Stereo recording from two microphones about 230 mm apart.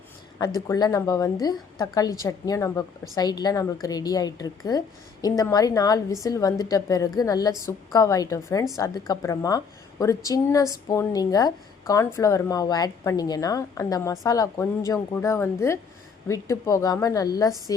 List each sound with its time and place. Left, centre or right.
0.3 s speech: centre